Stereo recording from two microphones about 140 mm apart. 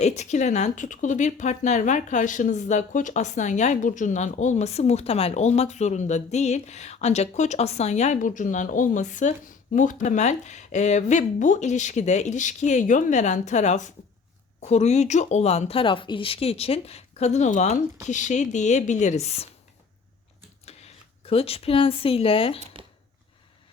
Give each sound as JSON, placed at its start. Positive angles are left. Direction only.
{"t": 0.0, "sound": "speech", "side_deg": 55}
{"t": 20.7, "sound": "speech", "side_deg": 45}